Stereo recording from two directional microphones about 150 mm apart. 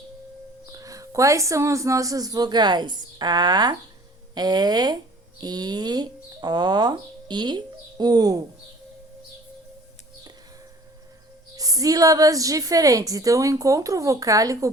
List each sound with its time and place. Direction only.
0.7 s a woman's voice: 25° right (ahead or behind)
11.5 s a woman's voice: 25° right (ahead or behind)